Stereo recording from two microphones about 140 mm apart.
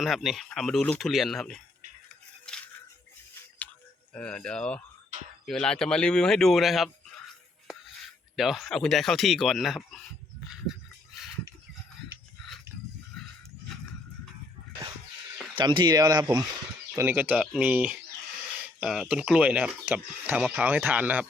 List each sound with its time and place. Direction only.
0.0 s speech: centre (ahead or behind)
4.1 s speech: 10° left (ahead or behind)
8.4 s speech: centre (ahead or behind)
15.5 s speech: 35° right (ahead or behind)
17.0 s speech: 15° right (ahead or behind)